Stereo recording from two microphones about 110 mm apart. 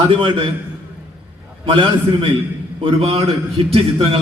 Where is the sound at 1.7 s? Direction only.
55° right (ahead or behind).